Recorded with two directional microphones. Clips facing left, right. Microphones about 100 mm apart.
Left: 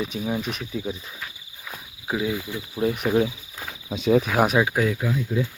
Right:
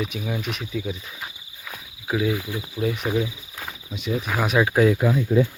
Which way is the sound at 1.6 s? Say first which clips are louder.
Even; 10° left (ahead or behind).